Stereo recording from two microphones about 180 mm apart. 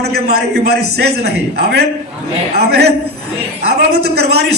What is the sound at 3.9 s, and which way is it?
Speech, 65° right (ahead or behind).